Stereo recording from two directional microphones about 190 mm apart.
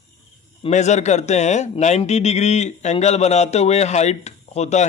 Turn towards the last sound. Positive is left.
turn(degrees=35)  # may be behind; listen again after turning